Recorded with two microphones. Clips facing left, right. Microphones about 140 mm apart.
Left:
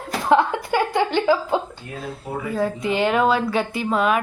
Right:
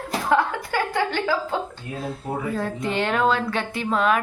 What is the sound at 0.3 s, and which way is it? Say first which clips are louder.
Speech: left 4 dB; 20° left (ahead or behind).